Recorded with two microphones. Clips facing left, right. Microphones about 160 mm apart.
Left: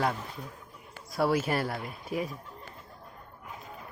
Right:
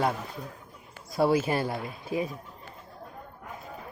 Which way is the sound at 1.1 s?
25° right (ahead or behind).